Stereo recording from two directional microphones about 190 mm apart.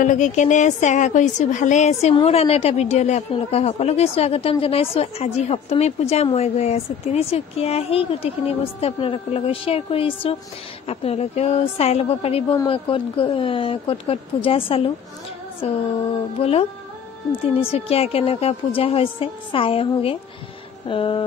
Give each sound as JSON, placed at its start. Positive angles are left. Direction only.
{"t": 0.0, "sound": "a woman's voice", "side_deg": 40}